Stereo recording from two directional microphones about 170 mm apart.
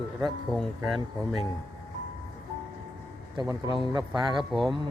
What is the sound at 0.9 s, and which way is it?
Speech, 25° right (ahead or behind).